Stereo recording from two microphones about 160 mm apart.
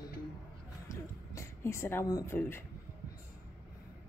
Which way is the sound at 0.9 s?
15° left (ahead or behind).